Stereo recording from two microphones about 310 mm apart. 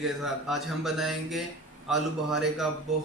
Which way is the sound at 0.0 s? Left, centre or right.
Centre.